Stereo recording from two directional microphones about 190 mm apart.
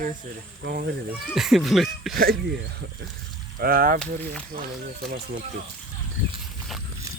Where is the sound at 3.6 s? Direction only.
50° right (ahead or behind).